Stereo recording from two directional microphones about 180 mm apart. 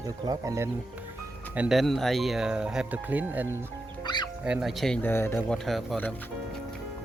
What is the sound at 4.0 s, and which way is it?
Music, 25° left (ahead or behind).